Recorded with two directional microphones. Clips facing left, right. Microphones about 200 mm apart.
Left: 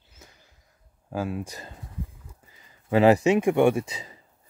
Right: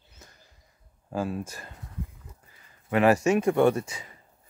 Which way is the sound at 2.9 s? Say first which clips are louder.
Left 3 dB; 25° left (ahead or behind).